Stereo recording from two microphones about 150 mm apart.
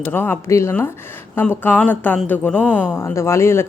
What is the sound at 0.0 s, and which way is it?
A woman's voice, 15° left (ahead or behind).